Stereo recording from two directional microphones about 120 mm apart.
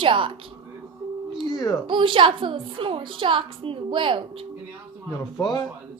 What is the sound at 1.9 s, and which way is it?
A woman's voice, 45° right (ahead or behind).